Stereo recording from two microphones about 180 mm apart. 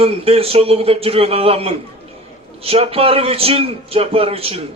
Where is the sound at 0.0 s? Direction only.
35° right (ahead or behind).